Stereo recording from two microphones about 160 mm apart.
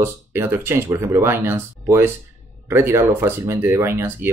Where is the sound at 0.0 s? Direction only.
15° right (ahead or behind).